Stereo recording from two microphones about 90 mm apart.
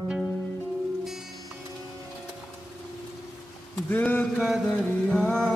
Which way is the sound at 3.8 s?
20° left (ahead or behind).